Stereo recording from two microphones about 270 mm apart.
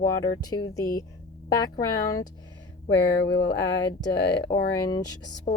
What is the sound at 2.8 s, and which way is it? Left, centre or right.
Speech, left.